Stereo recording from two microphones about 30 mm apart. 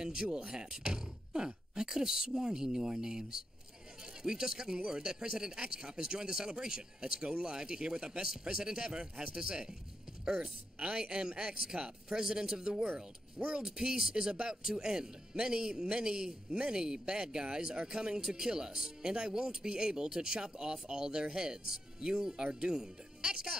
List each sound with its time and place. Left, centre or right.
0.0 s speech: right
12.8 s speech: right
13.7 s speech: right